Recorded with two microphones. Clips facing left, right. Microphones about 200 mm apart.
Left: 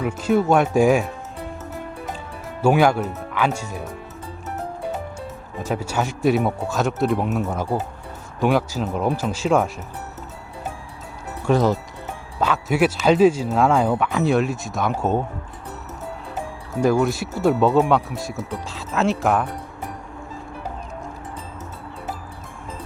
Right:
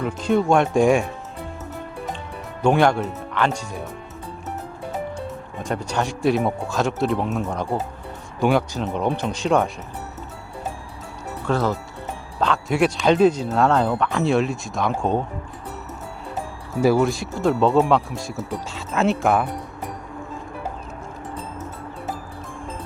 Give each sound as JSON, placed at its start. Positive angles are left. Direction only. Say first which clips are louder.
{"t": 0.0, "sound": "speech", "louder": "left 1 dB", "side_deg": 5}
{"t": 2.6, "sound": "speech", "louder": "left 1 dB", "side_deg": 5}
{"t": 5.5, "sound": "speech", "louder": "left 1 dB", "side_deg": 5}
{"t": 11.4, "sound": "speech", "louder": "left 4 dB", "side_deg": 15}
{"t": 12.4, "sound": "speech", "louder": "left 1 dB", "side_deg": 5}
{"t": 16.8, "sound": "speech", "louder": "right 1 dB", "side_deg": -5}